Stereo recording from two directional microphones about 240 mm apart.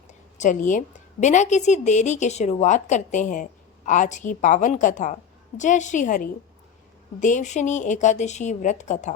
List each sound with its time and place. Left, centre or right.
0.1 s a woman's voice: left